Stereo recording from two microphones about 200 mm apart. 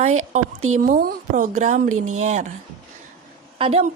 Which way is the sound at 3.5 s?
30° right (ahead or behind).